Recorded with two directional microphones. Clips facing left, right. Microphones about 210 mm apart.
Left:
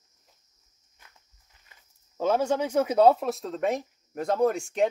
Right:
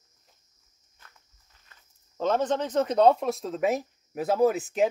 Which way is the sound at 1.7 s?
10° left (ahead or behind).